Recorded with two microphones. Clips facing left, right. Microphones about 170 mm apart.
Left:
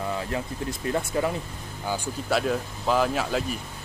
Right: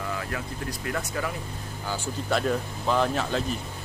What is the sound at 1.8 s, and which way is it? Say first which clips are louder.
Speech: left 2 dB; 15° left (ahead or behind).